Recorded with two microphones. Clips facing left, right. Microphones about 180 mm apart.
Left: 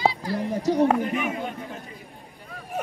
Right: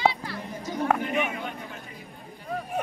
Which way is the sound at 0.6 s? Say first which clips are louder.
Left 10 dB; 75° left (ahead or behind).